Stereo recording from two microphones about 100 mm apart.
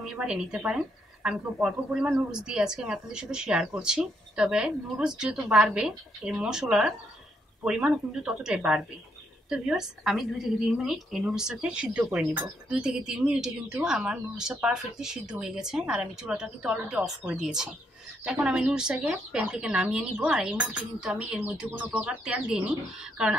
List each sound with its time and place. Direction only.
0.0 s a woman's voice: 5° right (ahead or behind)